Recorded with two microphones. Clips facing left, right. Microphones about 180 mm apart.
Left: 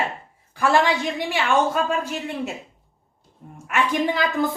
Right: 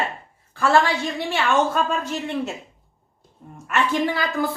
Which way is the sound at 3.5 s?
10° left (ahead or behind).